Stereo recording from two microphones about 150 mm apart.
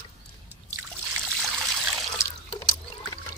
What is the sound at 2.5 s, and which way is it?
Liquid, 35° left (ahead or behind).